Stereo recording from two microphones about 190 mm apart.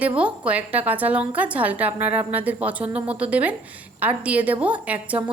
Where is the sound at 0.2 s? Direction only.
5° right (ahead or behind).